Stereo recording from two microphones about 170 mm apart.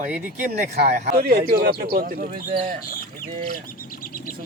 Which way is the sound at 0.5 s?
70° right (ahead or behind).